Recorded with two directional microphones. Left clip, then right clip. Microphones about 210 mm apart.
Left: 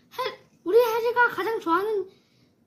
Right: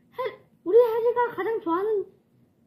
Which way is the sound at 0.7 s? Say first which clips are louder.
Right 1 dB; centre (ahead or behind).